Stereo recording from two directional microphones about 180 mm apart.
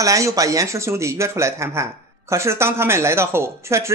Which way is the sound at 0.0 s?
20° right (ahead or behind).